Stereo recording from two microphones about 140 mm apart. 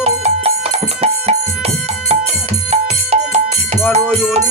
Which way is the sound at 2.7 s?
50° right (ahead or behind).